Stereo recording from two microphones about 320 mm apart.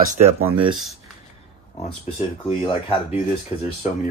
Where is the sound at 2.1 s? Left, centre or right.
Left.